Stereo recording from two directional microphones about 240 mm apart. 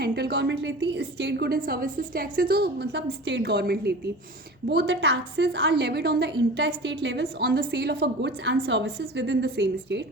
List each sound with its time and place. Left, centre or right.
0.0 s a woman's voice: right